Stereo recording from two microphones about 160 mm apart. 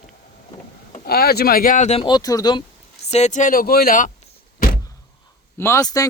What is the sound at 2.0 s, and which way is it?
Speech, 25° left (ahead or behind).